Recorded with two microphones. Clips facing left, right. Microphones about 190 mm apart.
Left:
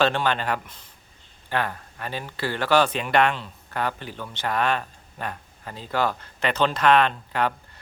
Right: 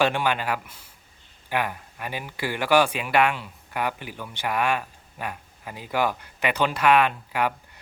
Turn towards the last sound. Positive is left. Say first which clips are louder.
# left 1 dB
turn(degrees=-10)  # may be behind; listen again after turning